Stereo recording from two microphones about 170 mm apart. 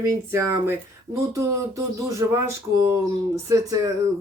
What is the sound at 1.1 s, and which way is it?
Speech, 20° right (ahead or behind).